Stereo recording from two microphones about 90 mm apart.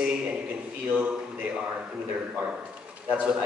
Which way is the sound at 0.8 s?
15° right (ahead or behind).